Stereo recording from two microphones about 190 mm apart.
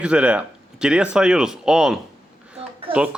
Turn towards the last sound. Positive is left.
turn(degrees=-5)  # may be behind; listen again after turning